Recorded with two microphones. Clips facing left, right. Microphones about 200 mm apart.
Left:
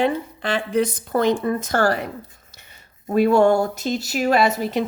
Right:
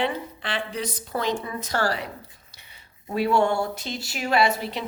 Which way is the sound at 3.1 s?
45° left (ahead or behind).